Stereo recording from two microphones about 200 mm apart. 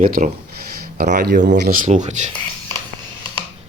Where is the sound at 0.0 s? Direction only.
40° right (ahead or behind).